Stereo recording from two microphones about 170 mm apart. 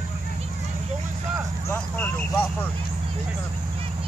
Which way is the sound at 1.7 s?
10° left (ahead or behind).